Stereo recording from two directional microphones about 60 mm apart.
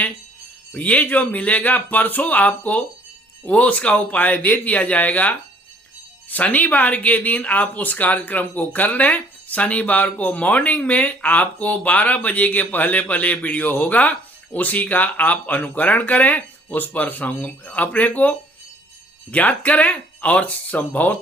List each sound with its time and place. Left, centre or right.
0.7 s speech: left